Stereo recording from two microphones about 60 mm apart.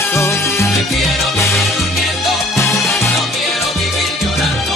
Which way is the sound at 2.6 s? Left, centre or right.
Left.